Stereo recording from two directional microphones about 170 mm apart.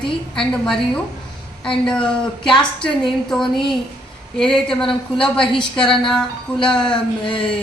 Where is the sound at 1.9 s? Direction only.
5° left (ahead or behind).